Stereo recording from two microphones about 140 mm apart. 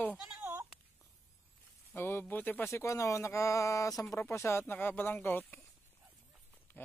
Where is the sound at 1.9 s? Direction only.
15° left (ahead or behind).